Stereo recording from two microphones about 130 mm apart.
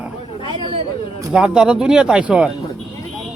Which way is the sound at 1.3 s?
5° right (ahead or behind).